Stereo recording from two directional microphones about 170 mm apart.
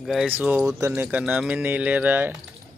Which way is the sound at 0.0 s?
Centre (ahead or behind).